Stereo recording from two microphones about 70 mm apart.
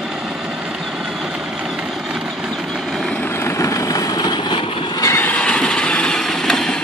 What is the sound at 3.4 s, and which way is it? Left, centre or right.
Vehicle, left.